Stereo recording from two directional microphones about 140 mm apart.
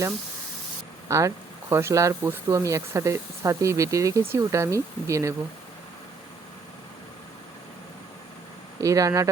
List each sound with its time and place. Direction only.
1.0 s speech: 20° right (ahead or behind)
8.8 s speech: 25° right (ahead or behind)